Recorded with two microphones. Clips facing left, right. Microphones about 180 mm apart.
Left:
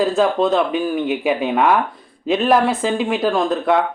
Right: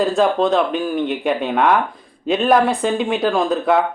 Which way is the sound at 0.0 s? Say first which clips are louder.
Even; centre (ahead or behind).